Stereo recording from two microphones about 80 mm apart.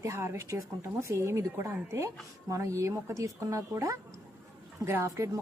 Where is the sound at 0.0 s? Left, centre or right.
Right.